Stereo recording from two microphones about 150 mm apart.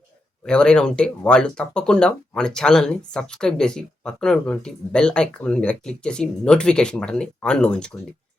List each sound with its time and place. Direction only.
0.4 s speech: 5° left (ahead or behind)